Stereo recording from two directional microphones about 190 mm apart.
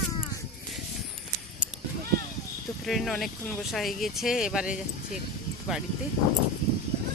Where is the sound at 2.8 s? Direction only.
Centre (ahead or behind).